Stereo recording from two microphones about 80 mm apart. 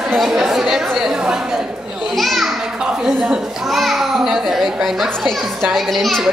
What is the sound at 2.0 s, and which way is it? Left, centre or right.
Children playing, centre.